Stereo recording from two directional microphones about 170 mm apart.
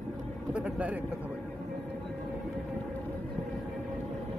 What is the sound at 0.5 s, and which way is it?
Vehicle, 5° right (ahead or behind).